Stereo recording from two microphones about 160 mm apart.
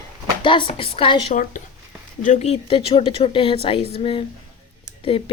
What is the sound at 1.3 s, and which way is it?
Speech, 55° left (ahead or behind).